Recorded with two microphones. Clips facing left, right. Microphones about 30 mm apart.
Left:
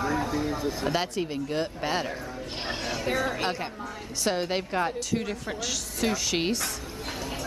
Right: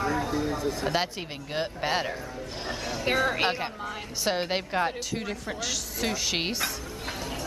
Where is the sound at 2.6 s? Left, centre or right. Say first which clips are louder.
Left 2 dB; left.